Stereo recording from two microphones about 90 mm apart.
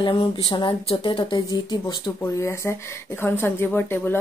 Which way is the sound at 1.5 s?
50° left (ahead or behind).